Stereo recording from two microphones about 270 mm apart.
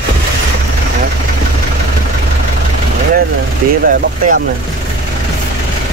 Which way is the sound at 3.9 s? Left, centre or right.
Right.